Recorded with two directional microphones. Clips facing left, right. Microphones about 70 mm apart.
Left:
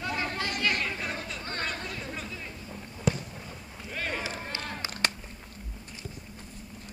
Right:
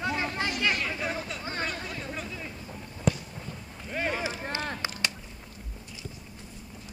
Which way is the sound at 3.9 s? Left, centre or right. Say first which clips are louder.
Right 4 dB; centre.